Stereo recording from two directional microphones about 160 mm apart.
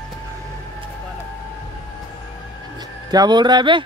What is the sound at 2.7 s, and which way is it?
Speech, 25° right (ahead or behind).